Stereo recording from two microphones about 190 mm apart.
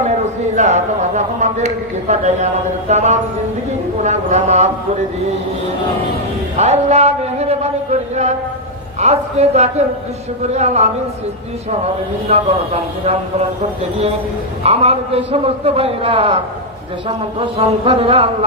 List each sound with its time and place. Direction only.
0.5 s a man's voice: 40° right (ahead or behind)
6.6 s a sound: 35° right (ahead or behind)
9.0 s a man's voice: 35° right (ahead or behind)
12.3 s a man's voice: 35° right (ahead or behind)
14.6 s a man's voice: 35° right (ahead or behind)